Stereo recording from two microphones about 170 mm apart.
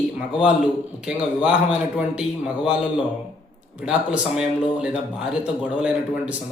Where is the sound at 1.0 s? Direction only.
5° right (ahead or behind).